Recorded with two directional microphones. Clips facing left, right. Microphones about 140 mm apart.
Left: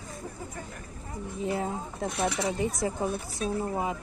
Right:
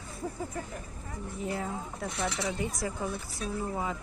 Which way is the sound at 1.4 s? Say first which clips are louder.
Left 4 dB; 20° left (ahead or behind).